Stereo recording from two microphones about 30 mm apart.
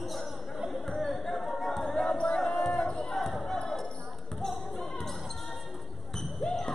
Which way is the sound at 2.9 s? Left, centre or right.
Centre.